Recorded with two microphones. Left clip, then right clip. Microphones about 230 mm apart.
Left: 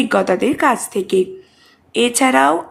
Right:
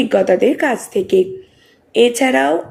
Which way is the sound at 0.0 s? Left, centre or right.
Centre.